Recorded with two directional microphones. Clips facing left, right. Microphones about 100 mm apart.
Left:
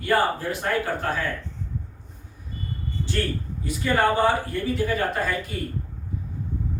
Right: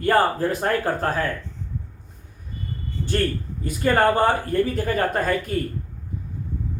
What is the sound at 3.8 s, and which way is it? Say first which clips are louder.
Speech: right 4 dB; 50° right (ahead or behind).